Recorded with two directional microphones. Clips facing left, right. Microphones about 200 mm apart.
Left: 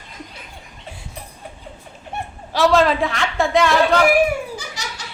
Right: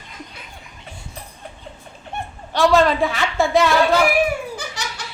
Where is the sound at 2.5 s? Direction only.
Centre (ahead or behind).